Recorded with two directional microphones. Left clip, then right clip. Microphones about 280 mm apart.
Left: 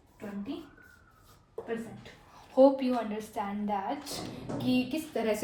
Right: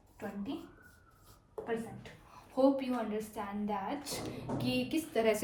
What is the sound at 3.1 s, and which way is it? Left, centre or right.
Speech, left.